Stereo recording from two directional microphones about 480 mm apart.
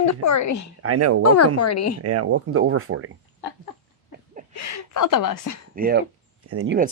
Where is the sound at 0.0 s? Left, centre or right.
Left.